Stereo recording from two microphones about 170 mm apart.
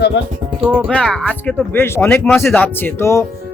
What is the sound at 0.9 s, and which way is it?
A man's voice, 5° left (ahead or behind).